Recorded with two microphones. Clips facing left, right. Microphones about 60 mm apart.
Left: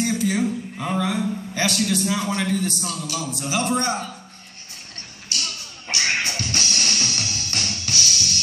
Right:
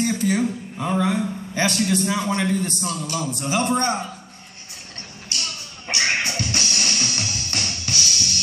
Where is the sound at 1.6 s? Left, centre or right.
Right.